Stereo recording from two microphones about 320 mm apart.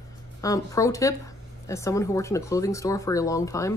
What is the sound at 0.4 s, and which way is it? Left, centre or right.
Speech, centre.